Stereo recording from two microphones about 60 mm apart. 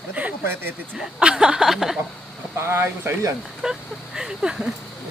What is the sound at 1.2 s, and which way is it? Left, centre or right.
Speech, centre.